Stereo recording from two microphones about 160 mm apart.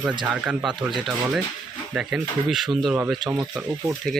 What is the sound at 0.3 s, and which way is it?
Speech, 5° right (ahead or behind).